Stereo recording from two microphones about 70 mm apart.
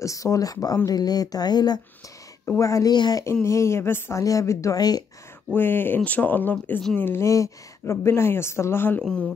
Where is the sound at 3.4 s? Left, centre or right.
Left.